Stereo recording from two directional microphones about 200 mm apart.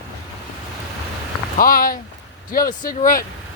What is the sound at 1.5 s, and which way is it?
Speech, 45° left (ahead or behind).